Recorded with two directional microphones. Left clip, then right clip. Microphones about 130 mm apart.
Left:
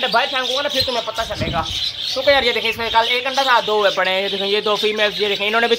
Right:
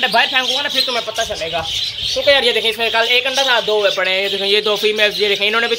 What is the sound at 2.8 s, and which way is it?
Speech, 30° right (ahead or behind).